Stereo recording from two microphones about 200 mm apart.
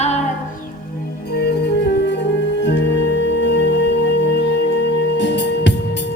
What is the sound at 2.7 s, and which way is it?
Music, 60° left (ahead or behind).